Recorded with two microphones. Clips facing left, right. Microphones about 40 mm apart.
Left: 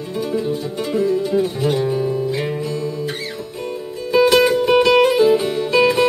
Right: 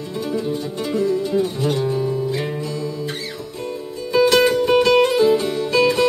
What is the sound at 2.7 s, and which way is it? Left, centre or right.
Guitar, left.